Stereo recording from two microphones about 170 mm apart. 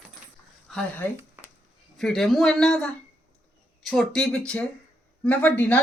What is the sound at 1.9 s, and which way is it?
Speech, 5° left (ahead or behind).